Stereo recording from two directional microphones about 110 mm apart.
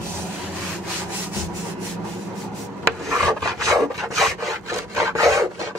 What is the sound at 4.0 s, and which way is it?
Rub, centre (ahead or behind).